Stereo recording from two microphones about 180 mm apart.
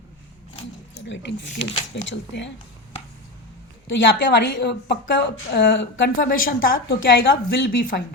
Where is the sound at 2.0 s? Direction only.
85° left.